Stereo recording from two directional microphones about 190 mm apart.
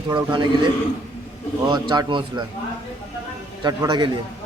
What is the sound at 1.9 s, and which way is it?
Speech, 25° right (ahead or behind).